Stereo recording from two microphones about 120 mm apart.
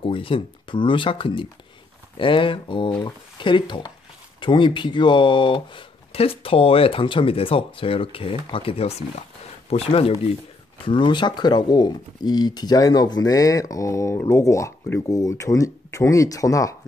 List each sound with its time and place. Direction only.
0.0 s speech: 50° left (ahead or behind)
10.9 s speech: 40° left (ahead or behind)